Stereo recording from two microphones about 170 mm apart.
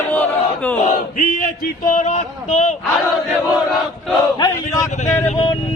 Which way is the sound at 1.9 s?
45° left (ahead or behind).